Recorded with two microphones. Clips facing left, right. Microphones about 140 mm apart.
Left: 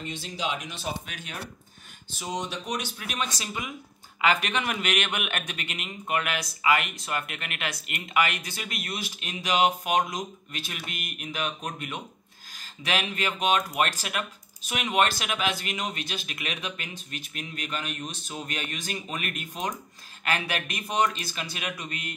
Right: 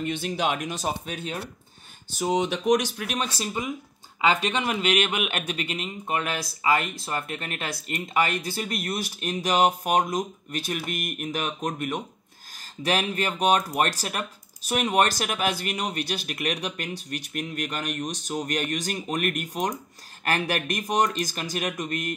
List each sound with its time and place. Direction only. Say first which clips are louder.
0.0 s speech: right 6 dB; 60° right (ahead or behind); by 1.4 s 30° right (ahead or behind)
2.2 s speech: right 10 dB; 60° right (ahead or behind)
3.0 s speech: right 3 dB; 40° right (ahead or behind)
4.2 s a man's voice: right 2 dB; 25° right (ahead or behind); by 22.1 s 45° right (ahead or behind)